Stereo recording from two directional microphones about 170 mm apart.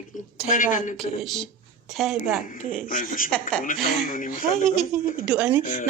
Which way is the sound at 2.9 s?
50° left (ahead or behind).